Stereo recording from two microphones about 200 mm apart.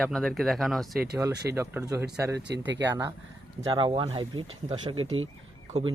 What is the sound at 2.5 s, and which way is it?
Speech, 60° right (ahead or behind).